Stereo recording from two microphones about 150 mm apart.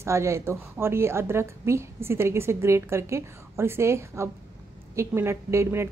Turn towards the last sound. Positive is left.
turn(degrees=-15)  # may be behind; listen again after turning